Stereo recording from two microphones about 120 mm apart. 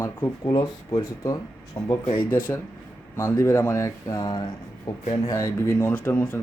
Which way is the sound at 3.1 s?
30° left (ahead or behind).